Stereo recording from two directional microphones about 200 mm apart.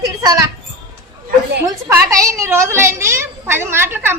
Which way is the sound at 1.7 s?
15° right (ahead or behind).